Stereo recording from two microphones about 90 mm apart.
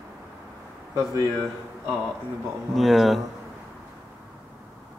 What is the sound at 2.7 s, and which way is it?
Speech, centre (ahead or behind).